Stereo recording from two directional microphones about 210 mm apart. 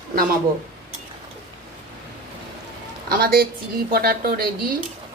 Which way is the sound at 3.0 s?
45° right (ahead or behind).